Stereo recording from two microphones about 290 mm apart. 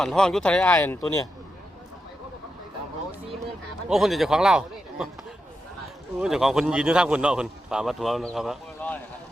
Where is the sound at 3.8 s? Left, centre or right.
Centre.